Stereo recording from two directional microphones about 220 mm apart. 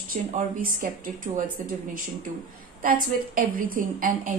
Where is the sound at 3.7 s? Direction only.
40° right (ahead or behind).